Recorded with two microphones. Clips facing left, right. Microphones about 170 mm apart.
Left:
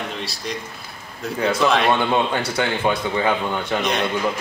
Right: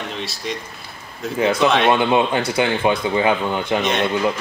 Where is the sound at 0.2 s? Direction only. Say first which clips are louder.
Right 2 dB; centre (ahead or behind).